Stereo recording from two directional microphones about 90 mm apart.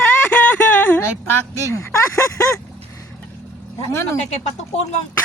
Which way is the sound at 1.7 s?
30° left (ahead or behind).